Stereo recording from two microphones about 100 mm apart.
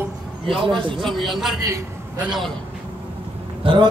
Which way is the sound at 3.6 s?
60° right (ahead or behind).